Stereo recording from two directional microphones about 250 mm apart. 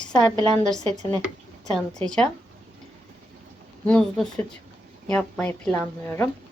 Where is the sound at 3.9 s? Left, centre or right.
Centre.